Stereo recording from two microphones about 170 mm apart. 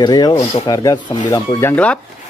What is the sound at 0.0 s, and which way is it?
Speech, 25° left (ahead or behind).